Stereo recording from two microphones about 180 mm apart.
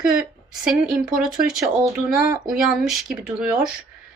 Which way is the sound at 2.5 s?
Centre (ahead or behind).